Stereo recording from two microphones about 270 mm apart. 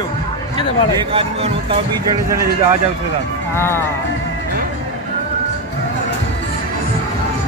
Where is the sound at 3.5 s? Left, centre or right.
Centre.